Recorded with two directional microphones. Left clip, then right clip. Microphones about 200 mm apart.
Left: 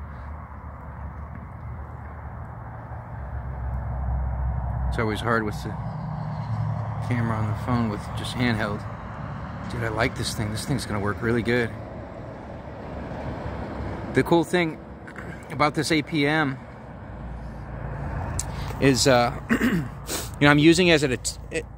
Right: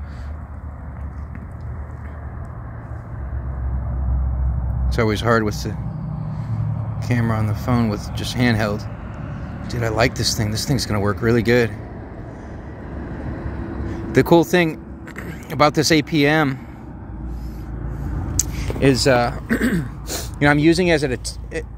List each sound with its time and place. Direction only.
4.9 s speech: 15° right (ahead or behind)
7.0 s speech: 15° right (ahead or behind)
14.1 s speech: 15° right (ahead or behind)
18.3 s vehicle: 15° right (ahead or behind)
18.8 s speech: 5° left (ahead or behind)